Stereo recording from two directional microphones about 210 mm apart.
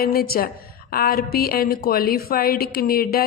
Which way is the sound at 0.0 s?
45° left (ahead or behind).